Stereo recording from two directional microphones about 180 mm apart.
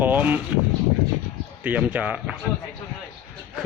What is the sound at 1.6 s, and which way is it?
Speech, 10° right (ahead or behind).